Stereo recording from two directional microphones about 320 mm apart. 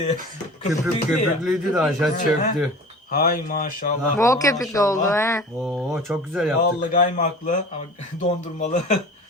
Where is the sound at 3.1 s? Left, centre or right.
Left.